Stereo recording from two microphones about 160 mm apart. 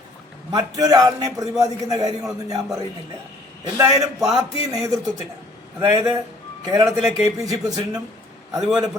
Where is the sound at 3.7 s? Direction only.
20° right (ahead or behind).